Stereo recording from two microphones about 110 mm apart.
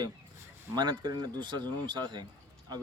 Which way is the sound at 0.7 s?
40° right (ahead or behind).